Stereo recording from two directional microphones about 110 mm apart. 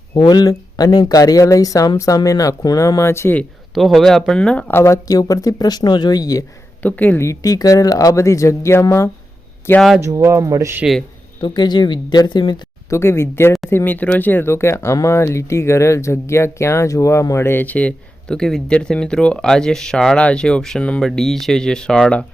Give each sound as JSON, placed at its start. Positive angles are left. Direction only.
{"t": 0.2, "sound": "speech", "side_deg": 40}
{"t": 3.8, "sound": "speech", "side_deg": 0}
{"t": 4.7, "sound": "speech", "side_deg": 25}
{"t": 6.8, "sound": "speech", "side_deg": 15}
{"t": 10.0, "sound": "speech", "side_deg": -25}
{"t": 11.3, "sound": "speech", "side_deg": 40}
{"t": 12.9, "sound": "speech", "side_deg": 25}